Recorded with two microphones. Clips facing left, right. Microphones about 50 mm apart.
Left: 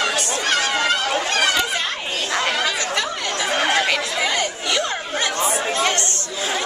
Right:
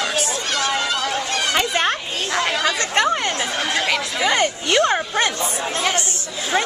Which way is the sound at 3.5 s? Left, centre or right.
Left.